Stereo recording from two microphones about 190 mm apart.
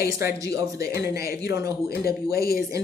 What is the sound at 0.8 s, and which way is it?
Speech, 55° left (ahead or behind).